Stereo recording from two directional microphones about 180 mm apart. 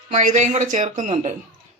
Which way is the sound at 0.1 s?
45° right (ahead or behind).